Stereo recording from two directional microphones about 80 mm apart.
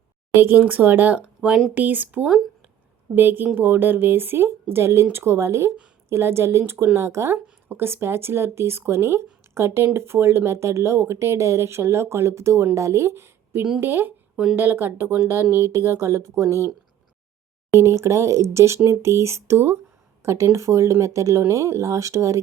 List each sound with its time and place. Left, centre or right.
0.3 s a woman's voice: right
1.4 s speech: centre
1.7 s a woman's voice: right
17.7 s speech: right